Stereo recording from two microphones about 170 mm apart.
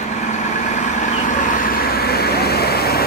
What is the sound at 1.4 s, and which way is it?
Vehicle, 60° left (ahead or behind).